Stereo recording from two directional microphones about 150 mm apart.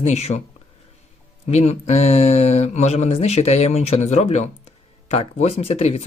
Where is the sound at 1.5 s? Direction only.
45° left (ahead or behind).